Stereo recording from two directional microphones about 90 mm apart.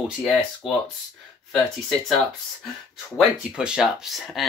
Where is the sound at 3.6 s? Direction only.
10° right (ahead or behind).